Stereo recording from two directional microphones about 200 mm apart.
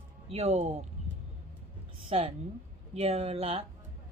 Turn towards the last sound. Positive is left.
turn(degrees=-30)  # may be behind; listen again after turning